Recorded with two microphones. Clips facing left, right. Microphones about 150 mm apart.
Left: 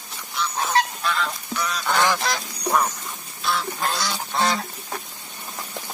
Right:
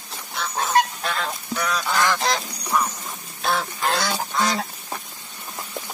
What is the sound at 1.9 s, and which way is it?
Goose, 15° left (ahead or behind).